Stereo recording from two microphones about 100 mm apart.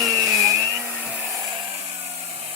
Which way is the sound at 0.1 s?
35° right (ahead or behind).